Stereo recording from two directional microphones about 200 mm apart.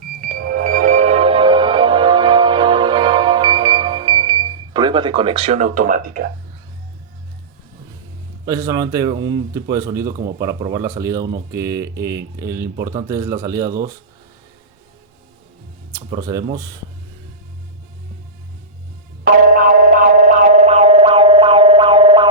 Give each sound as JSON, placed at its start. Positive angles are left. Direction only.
{"t": 0.3, "sound": "music", "side_deg": -45}
{"t": 8.4, "sound": "a man's voice", "side_deg": -15}
{"t": 16.0, "sound": "a man's voice", "side_deg": -20}
{"t": 19.2, "sound": "a sound", "side_deg": -45}